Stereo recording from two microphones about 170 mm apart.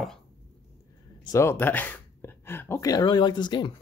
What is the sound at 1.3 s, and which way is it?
Speech, 15° left (ahead or behind).